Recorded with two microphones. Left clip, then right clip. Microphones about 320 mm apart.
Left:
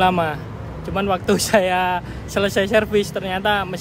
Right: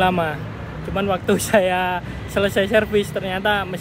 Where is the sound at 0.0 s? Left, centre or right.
Centre.